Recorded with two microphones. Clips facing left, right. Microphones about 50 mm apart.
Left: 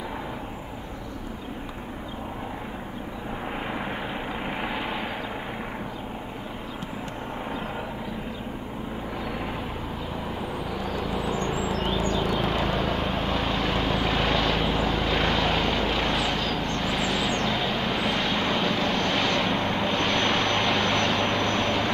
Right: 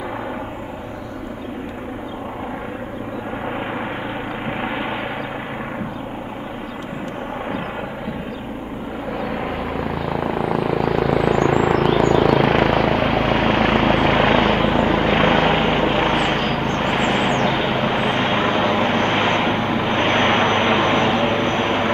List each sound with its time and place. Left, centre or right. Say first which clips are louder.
4.6 s vehicle: right 7 dB; right
10.2 s vehicle: right 13 dB; right